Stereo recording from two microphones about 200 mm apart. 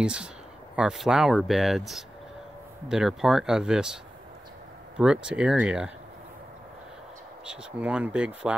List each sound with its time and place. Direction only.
0.0 s speech: 5° right (ahead or behind)
7.4 s speech: 5° right (ahead or behind)